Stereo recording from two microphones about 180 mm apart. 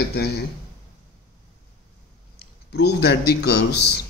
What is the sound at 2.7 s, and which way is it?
Speech, 65° left (ahead or behind).